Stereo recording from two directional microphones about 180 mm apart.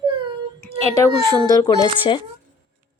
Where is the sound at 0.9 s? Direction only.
20° left (ahead or behind).